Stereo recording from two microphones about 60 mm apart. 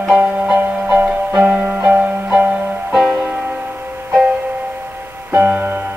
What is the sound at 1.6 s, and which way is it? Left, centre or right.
Music, right.